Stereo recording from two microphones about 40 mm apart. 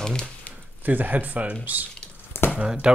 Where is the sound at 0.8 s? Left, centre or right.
Right.